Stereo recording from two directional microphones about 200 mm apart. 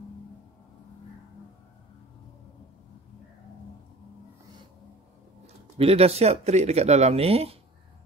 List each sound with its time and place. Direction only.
5.8 s speech: 30° right (ahead or behind)